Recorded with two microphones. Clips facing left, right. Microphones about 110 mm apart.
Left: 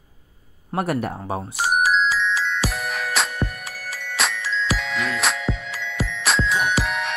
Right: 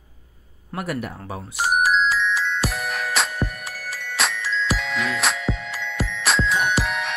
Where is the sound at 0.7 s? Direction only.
30° left (ahead or behind).